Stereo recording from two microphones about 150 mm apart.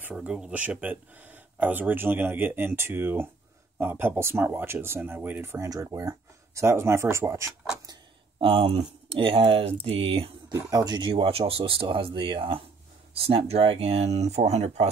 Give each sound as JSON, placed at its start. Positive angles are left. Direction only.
{"t": 0.0, "sound": "speech", "side_deg": -5}
{"t": 8.4, "sound": "speech", "side_deg": -40}
{"t": 10.5, "sound": "speech", "side_deg": -25}